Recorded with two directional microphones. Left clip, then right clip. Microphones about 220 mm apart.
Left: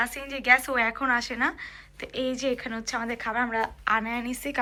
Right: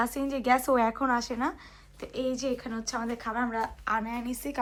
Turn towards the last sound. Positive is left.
turn(degrees=-10)  # may be behind; listen again after turning